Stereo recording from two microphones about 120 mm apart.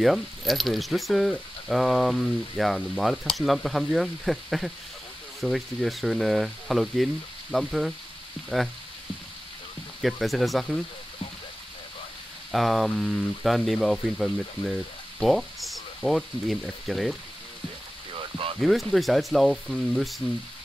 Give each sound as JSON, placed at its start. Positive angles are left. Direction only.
{"t": 0.0, "sound": "sizzle", "side_deg": 0}
{"t": 10.0, "sound": "sizzle", "side_deg": 0}
{"t": 12.4, "sound": "sizzle", "side_deg": 0}
{"t": 18.1, "sound": "a sound", "side_deg": -50}
{"t": 18.6, "sound": "sizzle", "side_deg": 0}